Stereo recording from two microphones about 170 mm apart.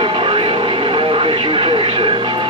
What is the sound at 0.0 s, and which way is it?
Vehicle, 30° right (ahead or behind).